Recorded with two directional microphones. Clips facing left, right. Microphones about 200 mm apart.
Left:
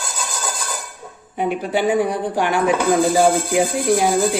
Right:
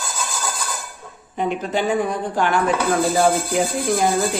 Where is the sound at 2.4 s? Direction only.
15° left (ahead or behind).